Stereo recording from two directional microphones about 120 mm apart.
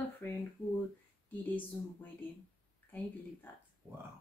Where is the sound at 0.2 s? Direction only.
20° left (ahead or behind).